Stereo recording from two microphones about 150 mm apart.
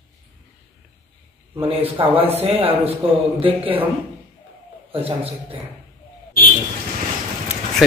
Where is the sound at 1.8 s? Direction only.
40° right (ahead or behind).